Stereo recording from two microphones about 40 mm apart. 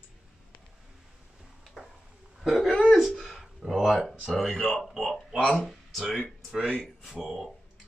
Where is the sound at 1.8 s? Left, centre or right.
Centre.